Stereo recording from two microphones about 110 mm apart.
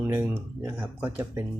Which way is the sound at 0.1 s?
20° right (ahead or behind).